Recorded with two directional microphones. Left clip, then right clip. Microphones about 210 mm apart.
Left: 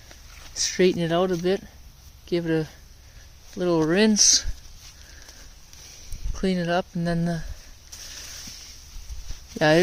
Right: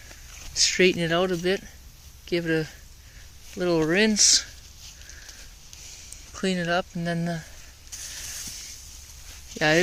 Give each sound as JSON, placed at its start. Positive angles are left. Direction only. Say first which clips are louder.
{"t": 0.5, "sound": "speech", "louder": "right 1 dB", "side_deg": 15}
{"t": 6.3, "sound": "speech", "louder": "left 1 dB", "side_deg": 25}
{"t": 9.6, "sound": "speech", "louder": "left 2 dB", "side_deg": 30}